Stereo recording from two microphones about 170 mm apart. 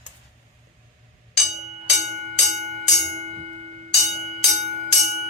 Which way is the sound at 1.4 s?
45° right (ahead or behind).